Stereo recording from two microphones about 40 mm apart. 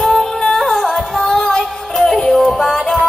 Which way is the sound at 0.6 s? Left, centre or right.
Centre.